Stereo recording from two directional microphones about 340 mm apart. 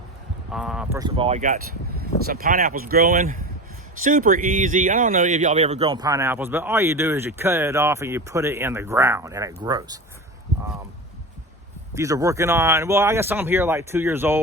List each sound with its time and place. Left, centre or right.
0.5 s speech: centre
11.9 s speech: centre